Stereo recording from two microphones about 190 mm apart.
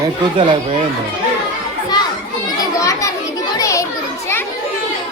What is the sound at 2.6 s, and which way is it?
Children playing, 20° left (ahead or behind).